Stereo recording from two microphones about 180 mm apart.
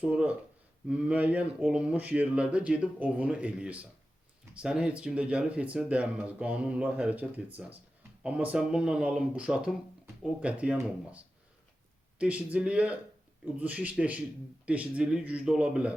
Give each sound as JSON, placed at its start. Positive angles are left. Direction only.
{"t": 0.0, "sound": "speech", "side_deg": -5}
{"t": 12.2, "sound": "speech", "side_deg": -5}